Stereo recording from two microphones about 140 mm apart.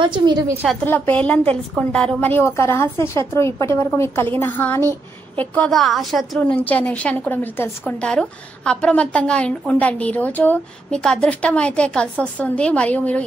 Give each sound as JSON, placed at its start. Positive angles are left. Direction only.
{"t": 0.0, "sound": "a woman's voice", "side_deg": -35}
{"t": 0.8, "sound": "a woman's voice", "side_deg": 15}
{"t": 6.4, "sound": "a woman's voice", "side_deg": 10}